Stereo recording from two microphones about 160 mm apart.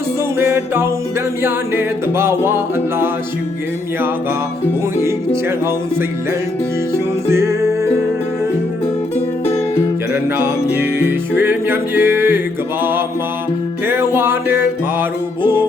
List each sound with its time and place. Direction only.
0.3 s music: 15° right (ahead or behind)
5.0 s music: 15° right (ahead or behind)
10.1 s music: 15° right (ahead or behind)